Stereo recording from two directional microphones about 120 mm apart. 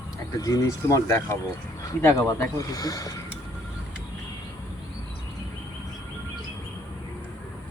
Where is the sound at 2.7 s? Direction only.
30° left (ahead or behind).